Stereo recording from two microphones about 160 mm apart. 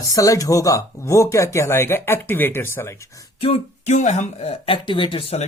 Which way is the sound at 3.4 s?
40° left (ahead or behind).